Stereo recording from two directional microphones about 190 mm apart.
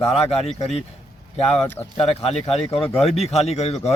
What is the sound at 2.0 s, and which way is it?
Speech, 30° left (ahead or behind).